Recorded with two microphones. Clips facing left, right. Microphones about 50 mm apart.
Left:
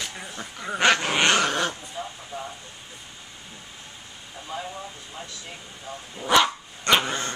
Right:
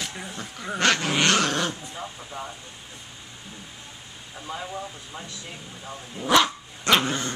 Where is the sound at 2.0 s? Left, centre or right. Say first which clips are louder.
Left 1 dB; centre.